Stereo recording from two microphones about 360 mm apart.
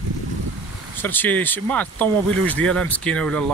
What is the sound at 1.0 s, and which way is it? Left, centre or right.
Speech, centre.